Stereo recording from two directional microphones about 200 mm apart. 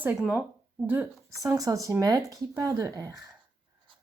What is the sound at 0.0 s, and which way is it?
Speech, 10° right (ahead or behind).